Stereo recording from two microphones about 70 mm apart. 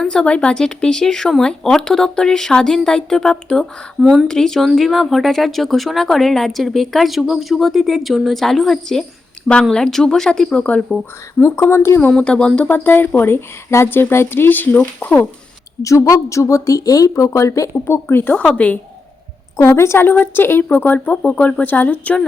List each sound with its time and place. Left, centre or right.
0.0 s speech: centre
4.0 s speech: centre
4.3 s speech: centre
11.3 s speech: left
12.1 s speech: centre
12.6 s speech: left
15.8 s a woman's voice: left
17.8 s speech: left
18.3 s speech: centre
19.5 s speech: left